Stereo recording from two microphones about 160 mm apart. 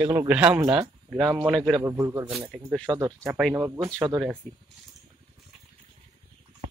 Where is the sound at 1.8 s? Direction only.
15° right (ahead or behind).